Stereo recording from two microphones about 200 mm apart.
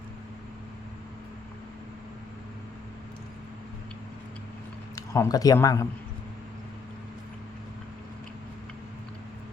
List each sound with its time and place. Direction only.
4.9 s a man's voice: 15° left (ahead or behind)